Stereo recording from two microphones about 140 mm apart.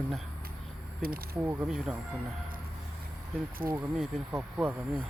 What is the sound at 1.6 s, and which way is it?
Speech, 5° right (ahead or behind).